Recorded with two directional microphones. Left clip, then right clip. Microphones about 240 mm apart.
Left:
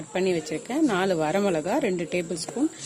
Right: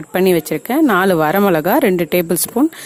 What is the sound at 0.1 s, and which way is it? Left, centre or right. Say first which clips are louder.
A woman's voice: right 11 dB; right.